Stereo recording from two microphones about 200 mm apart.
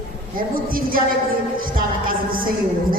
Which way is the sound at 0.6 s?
45° right (ahead or behind).